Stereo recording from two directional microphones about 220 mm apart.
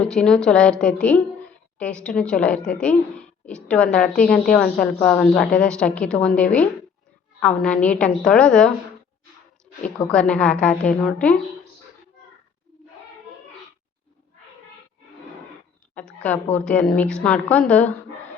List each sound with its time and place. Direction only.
0.1 s a woman's voice: 5° left (ahead or behind)
9.8 s a woman's voice: 5° left (ahead or behind)
16.0 s a woman's voice: 5° left (ahead or behind)